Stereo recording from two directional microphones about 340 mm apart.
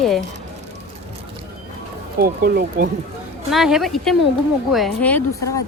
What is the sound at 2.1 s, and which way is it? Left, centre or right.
Speech, right.